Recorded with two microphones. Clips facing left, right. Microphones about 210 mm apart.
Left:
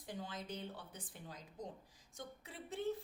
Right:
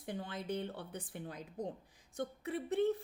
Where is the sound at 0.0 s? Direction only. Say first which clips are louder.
Right 5 dB; 60° right (ahead or behind).